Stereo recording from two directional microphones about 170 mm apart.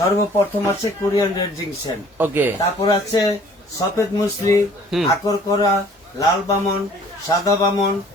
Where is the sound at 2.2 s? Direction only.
10° right (ahead or behind).